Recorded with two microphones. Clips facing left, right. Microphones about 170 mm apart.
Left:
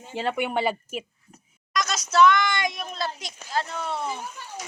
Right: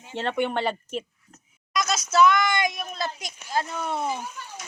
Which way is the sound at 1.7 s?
5° right (ahead or behind).